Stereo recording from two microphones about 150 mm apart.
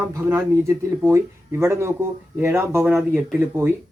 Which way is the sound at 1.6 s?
20° right (ahead or behind).